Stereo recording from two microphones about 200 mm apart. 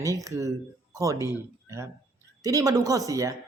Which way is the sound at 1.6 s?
15° right (ahead or behind).